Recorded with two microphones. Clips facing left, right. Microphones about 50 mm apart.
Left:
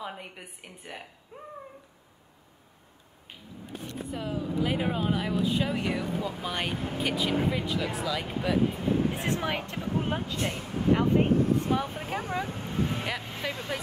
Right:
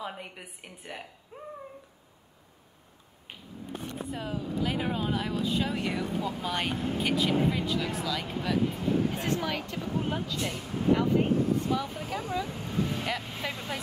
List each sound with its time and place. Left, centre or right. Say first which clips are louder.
0.0 s a woman's voice: even; centre
4.1 s a woman's voice: left 2 dB; centre
4.4 s speech: left 3 dB; centre
5.9 s speech: even; left
6.4 s speech: right 1 dB; centre
8.4 s speech: left 2 dB; left
13.0 s a woman's voice: even; centre